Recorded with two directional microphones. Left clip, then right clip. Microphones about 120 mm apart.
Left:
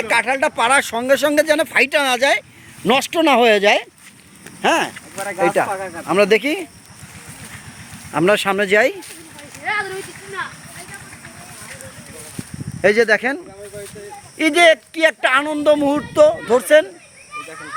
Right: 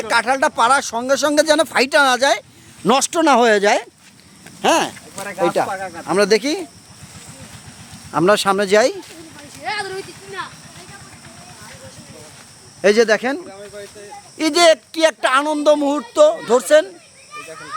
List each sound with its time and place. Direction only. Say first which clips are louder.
0.2 s speech: right 1 dB; 45° right (ahead or behind)
0.4 s speech: right 2 dB; 30° right (ahead or behind)
0.8 s speech: left 3 dB; 15° right (ahead or behind)
1.3 s speech: right 1 dB; 40° right (ahead or behind)
4.6 s speech: right 1 dB; 15° right (ahead or behind)
5.4 s speech: left 1 dB; 25° right (ahead or behind)
8.1 s speech: right 1 dB; 20° right (ahead or behind)
9.6 s a sound: left 2 dB; 5° right (ahead or behind)
12.8 s speech: even; 15° left (ahead or behind)
14.3 s speech: left 1 dB; 15° right (ahead or behind)
15.9 s speech: even; 5° left (ahead or behind)